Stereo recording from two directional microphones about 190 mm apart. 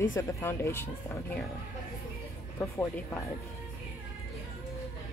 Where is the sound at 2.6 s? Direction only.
10° left (ahead or behind).